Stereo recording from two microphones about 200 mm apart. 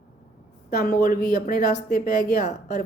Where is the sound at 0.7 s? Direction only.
50° left (ahead or behind).